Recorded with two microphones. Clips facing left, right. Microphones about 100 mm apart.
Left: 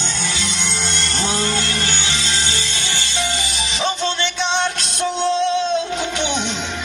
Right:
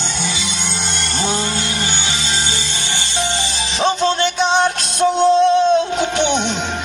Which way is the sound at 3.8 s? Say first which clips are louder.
Right 6 dB; 40° right (ahead or behind).